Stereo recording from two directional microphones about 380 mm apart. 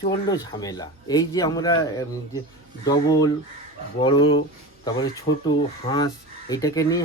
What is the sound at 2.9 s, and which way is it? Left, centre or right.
Speech, centre.